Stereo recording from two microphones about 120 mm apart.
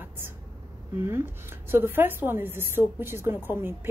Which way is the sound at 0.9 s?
20° right (ahead or behind).